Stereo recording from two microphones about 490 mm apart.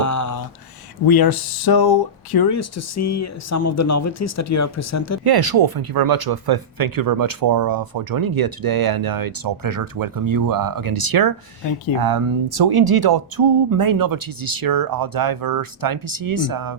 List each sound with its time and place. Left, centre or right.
0.0 s a sound: left
1.0 s speech: left
2.6 s speech: left
5.2 s speech: right